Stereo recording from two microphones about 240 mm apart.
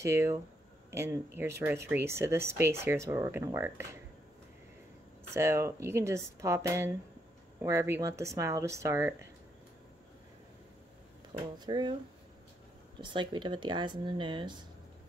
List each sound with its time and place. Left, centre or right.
0.0 s speech: centre
5.3 s speech: centre
11.5 s speech: centre
13.0 s speech: centre